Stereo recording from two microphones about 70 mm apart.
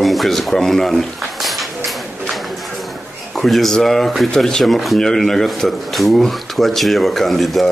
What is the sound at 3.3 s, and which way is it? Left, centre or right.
Speech, centre.